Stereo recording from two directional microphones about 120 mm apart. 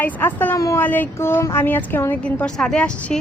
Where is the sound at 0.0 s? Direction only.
15° left (ahead or behind).